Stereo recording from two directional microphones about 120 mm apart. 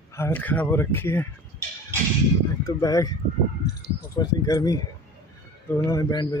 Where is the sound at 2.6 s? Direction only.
30° left (ahead or behind).